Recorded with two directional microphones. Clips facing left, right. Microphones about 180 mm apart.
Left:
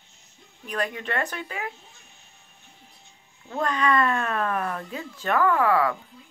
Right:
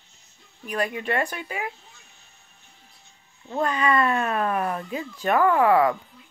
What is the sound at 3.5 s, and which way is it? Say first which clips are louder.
Speech: right 1 dB; 10° right (ahead or behind).